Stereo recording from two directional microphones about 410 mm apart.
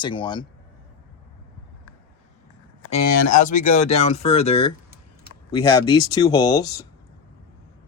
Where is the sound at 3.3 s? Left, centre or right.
Centre.